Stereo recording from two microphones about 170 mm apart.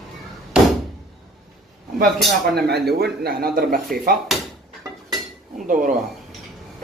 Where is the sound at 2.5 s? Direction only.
70° right (ahead or behind).